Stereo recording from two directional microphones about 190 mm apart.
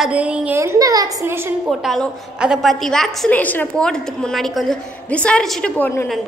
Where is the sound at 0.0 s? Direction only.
5° right (ahead or behind).